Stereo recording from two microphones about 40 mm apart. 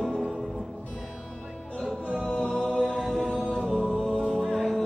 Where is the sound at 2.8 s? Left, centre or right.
Centre.